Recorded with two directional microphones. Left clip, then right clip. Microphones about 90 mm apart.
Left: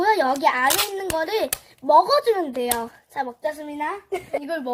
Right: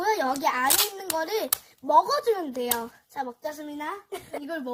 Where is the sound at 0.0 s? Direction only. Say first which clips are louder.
Left 6 dB; 20° right (ahead or behind).